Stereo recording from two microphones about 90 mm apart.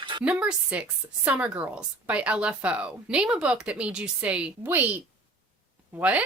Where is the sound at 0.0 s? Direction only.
65° right (ahead or behind).